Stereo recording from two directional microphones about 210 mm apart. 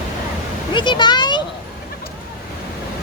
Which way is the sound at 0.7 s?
20° left (ahead or behind).